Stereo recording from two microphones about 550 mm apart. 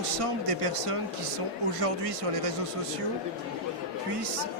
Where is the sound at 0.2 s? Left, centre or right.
Right.